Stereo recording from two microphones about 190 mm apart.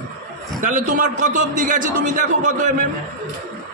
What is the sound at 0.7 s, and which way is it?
A man's voice, 40° right (ahead or behind).